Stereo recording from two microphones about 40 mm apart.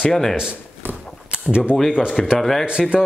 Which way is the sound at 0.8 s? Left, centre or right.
Right.